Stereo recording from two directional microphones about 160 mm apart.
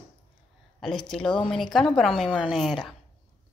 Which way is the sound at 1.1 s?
5° left (ahead or behind).